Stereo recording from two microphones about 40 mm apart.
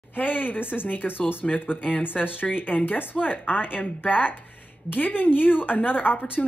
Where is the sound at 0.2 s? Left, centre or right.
Left.